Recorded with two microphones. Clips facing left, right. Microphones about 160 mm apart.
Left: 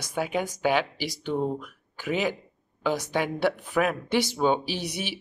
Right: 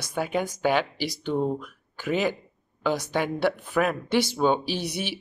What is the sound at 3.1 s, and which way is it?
Speech, 10° left (ahead or behind).